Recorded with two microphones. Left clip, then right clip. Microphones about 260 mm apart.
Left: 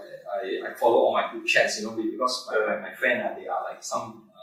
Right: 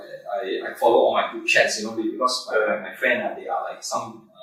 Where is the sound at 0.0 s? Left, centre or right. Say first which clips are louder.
Right 3 dB; centre.